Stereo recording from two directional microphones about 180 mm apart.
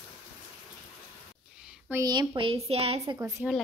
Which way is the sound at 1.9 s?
20° right (ahead or behind).